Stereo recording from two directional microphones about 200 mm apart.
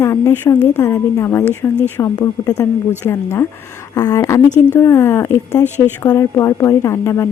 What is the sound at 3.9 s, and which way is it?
A woman's voice, 20° left (ahead or behind).